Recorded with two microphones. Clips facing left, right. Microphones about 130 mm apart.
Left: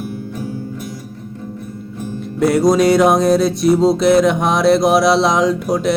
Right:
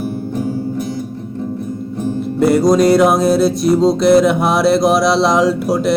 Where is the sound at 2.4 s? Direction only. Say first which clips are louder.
Right 1 dB; centre (ahead or behind).